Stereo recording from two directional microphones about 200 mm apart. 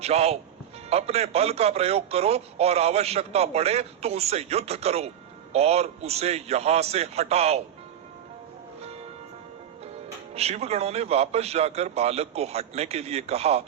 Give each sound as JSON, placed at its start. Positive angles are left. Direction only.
{"t": 0.0, "sound": "a man's voice", "side_deg": -30}
{"t": 10.3, "sound": "a man's voice", "side_deg": -30}